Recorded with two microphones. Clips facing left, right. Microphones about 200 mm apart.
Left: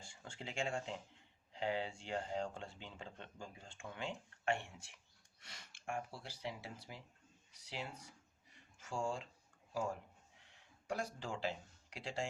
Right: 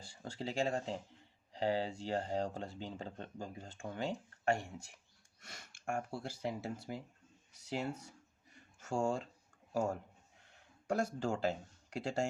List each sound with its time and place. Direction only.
0.0 s speech: 35° right (ahead or behind)
8.5 s a sound: 45° right (ahead or behind)
9.7 s speech: 45° right (ahead or behind)